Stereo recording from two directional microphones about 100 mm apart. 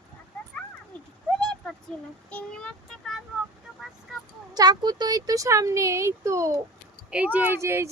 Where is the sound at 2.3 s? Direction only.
10° left (ahead or behind).